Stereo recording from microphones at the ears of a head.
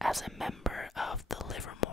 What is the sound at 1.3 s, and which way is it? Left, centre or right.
Speech, left.